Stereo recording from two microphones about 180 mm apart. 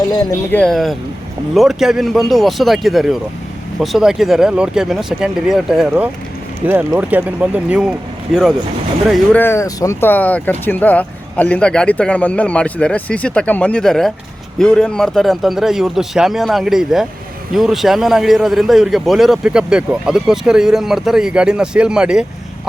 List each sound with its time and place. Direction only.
0.1 s speech: 20° left (ahead or behind)
0.5 s a man's voice: 5° left (ahead or behind)
9.4 s a man's voice: 15° left (ahead or behind); by 22.3 s 5° right (ahead or behind)